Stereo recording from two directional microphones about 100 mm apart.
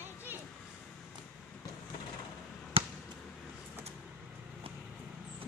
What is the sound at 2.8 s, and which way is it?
Basketball bounce, 70° right (ahead or behind).